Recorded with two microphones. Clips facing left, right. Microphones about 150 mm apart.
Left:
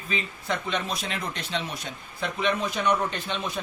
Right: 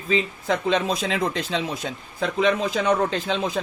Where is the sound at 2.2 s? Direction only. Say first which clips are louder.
Right 6 dB; 90° right.